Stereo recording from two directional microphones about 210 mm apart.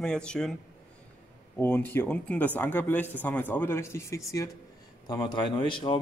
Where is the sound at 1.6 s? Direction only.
10° left (ahead or behind).